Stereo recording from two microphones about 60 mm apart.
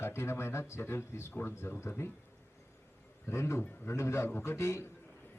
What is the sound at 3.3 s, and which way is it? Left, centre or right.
Speech, left.